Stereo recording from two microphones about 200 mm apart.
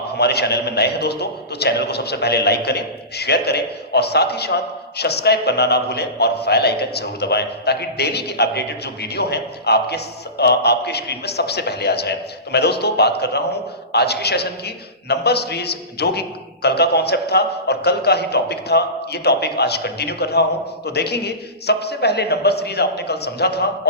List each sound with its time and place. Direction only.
0.2 s a man's voice: 55° left (ahead or behind)